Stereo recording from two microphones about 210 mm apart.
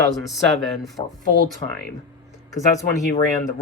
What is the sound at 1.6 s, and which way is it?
Speech, 30° left (ahead or behind).